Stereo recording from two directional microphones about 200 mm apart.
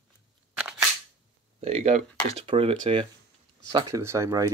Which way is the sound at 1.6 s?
30° right (ahead or behind).